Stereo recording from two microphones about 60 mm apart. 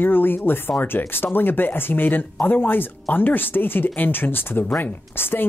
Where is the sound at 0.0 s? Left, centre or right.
Left.